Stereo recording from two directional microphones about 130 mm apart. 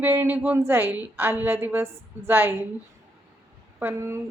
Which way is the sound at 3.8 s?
20° right (ahead or behind).